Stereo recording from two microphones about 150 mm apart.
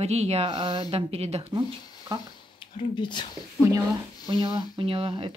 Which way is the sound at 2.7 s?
30° left (ahead or behind).